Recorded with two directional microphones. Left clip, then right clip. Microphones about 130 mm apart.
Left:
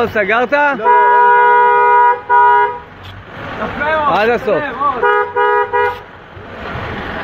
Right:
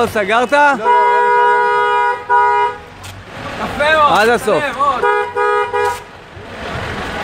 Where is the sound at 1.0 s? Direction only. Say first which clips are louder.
Left 5 dB; 5° left (ahead or behind).